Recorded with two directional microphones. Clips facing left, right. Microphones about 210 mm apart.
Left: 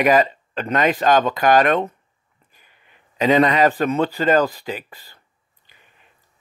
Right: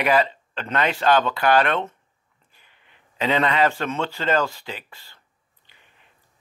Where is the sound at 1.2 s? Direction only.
40° left (ahead or behind).